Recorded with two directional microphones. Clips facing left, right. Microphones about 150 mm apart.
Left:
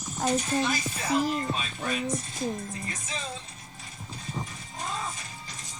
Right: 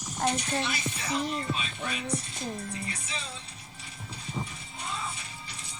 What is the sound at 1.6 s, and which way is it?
Speech, 40° left (ahead or behind).